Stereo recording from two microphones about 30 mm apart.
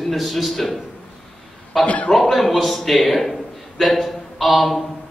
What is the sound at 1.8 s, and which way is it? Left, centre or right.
Speech, left.